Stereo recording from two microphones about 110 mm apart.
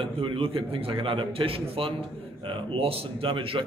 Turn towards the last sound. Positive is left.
turn(degrees=-55)  # may be behind; listen again after turning